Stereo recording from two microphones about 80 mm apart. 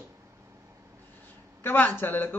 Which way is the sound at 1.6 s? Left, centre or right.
Left.